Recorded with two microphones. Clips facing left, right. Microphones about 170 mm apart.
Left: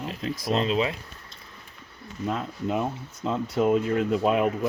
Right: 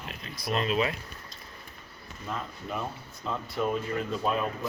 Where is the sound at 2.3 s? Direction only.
80° left.